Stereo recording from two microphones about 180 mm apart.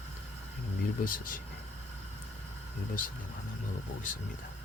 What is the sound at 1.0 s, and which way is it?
Speech, 50° left (ahead or behind).